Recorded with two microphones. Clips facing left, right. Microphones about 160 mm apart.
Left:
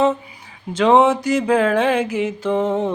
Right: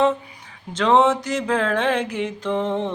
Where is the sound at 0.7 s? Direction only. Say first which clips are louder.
Left 3 dB; 10° left (ahead or behind).